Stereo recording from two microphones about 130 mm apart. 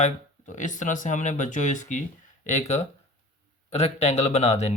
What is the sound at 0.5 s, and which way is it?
Speech, 75° left (ahead or behind).